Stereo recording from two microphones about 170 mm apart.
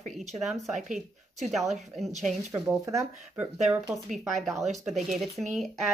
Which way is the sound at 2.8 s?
15° right (ahead or behind).